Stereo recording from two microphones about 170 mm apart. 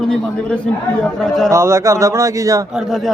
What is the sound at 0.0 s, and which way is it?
Speech, 5° left (ahead or behind).